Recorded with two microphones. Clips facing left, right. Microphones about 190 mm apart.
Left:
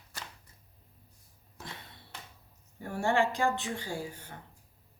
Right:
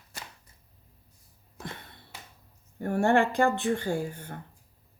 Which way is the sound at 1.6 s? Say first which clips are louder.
Right 5 dB; 55° right (ahead or behind).